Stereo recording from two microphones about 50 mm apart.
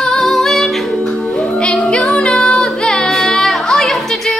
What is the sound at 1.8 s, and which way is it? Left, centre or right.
Music, centre.